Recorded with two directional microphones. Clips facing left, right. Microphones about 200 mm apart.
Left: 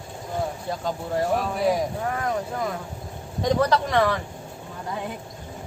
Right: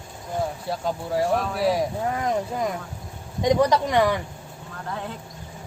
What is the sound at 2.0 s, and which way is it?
Speech, 20° right (ahead or behind).